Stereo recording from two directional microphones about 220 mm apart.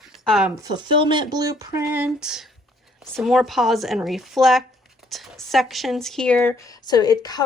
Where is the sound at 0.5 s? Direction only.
20° right (ahead or behind).